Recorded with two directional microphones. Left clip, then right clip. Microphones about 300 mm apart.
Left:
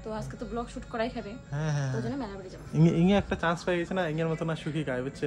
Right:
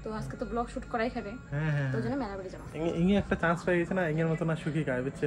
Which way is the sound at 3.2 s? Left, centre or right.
Centre.